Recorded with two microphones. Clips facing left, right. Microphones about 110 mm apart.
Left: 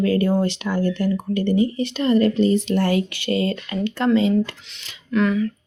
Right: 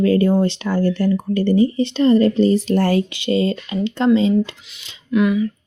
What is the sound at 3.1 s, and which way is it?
Speech, 20° right (ahead or behind).